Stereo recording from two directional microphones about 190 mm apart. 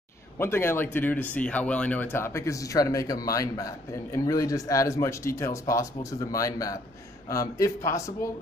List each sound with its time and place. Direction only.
0.4 s speech: 10° left (ahead or behind)